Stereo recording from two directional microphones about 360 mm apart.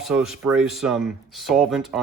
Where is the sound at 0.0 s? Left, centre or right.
Centre.